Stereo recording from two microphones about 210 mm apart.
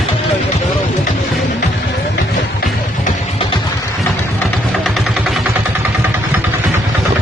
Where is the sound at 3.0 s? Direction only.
25° left (ahead or behind).